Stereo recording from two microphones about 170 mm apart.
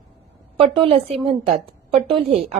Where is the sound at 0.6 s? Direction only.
35° right (ahead or behind).